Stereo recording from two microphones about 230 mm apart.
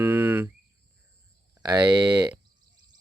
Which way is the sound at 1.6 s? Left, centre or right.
Centre.